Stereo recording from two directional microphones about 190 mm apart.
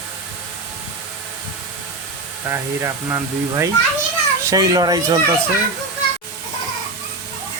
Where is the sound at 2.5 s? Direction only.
15° right (ahead or behind).